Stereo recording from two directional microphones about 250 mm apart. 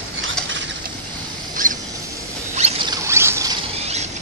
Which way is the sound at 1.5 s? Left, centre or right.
Right.